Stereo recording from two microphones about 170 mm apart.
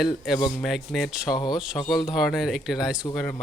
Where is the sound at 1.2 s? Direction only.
25° left (ahead or behind).